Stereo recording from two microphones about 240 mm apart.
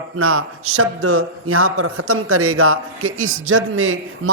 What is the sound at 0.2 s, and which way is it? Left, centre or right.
A man's voice, right.